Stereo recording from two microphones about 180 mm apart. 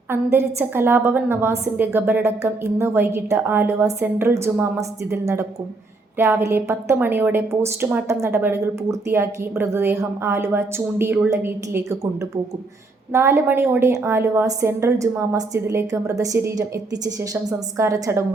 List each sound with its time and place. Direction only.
0.1 s a woman's voice: 10° right (ahead or behind)